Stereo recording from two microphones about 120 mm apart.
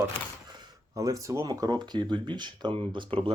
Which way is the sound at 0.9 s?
25° right (ahead or behind).